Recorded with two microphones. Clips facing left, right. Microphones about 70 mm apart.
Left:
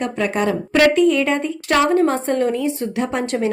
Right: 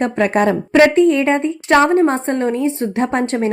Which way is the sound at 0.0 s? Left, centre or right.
Right.